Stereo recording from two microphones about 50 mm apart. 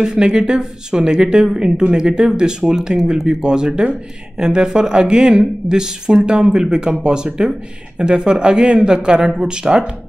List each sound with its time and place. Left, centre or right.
0.0 s speech: centre
3.4 s speech: centre